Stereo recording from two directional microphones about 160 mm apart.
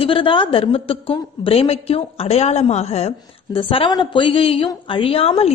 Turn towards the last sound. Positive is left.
turn(degrees=40)  # may be behind; listen again after turning